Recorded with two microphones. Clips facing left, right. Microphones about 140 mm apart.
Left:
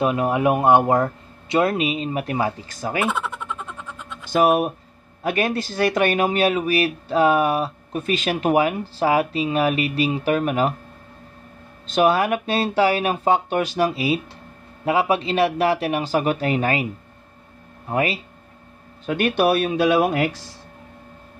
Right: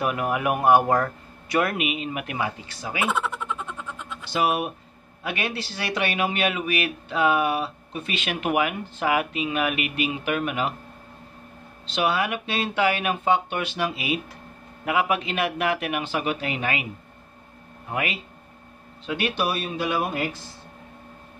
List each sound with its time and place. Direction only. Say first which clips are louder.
0.0 s speech: left 5 dB; 25° left (ahead or behind); by 3.0 s 45° left (ahead or behind)
3.0 s a sound: even; centre (ahead or behind)
4.3 s speech: left 7 dB; 45° left (ahead or behind)
11.9 s speech: left 6 dB; 45° left (ahead or behind)
17.8 s speech: left 6 dB; 35° left (ahead or behind)
19.0 s speech: left 7 dB; 50° left (ahead or behind); by 20.2 s 85° left